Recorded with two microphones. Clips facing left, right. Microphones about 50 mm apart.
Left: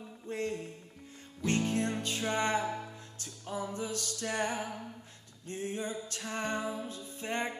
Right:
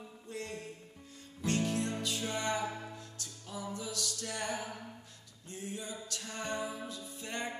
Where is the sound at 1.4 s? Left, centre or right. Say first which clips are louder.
Left 2 dB; left.